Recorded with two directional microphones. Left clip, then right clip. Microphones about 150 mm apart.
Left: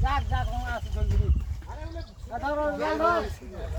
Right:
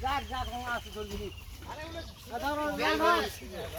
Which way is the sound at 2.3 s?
5° right (ahead or behind).